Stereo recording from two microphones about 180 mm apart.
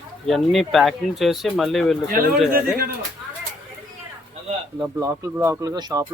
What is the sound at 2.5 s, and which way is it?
Speech, 55° right (ahead or behind).